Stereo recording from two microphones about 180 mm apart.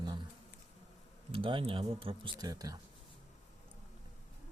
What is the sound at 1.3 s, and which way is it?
Speech, 30° right (ahead or behind).